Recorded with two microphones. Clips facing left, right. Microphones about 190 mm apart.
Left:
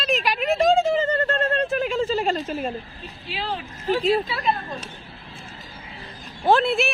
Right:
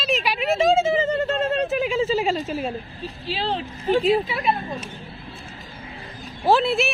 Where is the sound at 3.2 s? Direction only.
30° right (ahead or behind).